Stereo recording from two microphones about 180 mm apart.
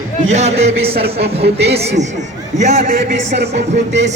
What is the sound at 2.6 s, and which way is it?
A man's voice, 35° right (ahead or behind).